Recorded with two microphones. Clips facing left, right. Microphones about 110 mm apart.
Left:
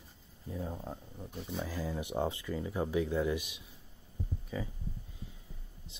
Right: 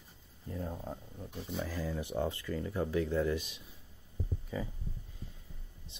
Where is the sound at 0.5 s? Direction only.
5° left (ahead or behind).